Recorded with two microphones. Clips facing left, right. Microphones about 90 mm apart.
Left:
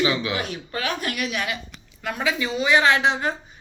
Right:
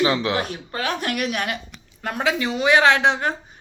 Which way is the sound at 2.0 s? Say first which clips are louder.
Right 2 dB; 60° right (ahead or behind).